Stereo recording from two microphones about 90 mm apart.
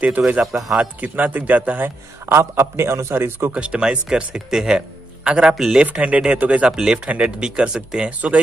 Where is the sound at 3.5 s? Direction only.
10° right (ahead or behind).